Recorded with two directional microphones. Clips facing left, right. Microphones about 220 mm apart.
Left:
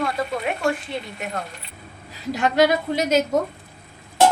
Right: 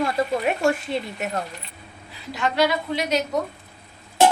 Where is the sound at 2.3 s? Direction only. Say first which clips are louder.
Left 4 dB; 45° left (ahead or behind).